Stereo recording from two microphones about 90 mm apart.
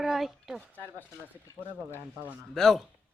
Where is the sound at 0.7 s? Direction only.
20° left (ahead or behind).